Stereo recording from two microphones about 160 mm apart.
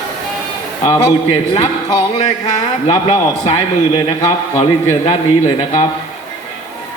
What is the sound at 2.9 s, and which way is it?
A man's voice, 35° left (ahead or behind).